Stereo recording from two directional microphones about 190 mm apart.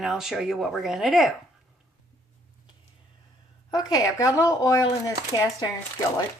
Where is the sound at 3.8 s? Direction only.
20° left (ahead or behind).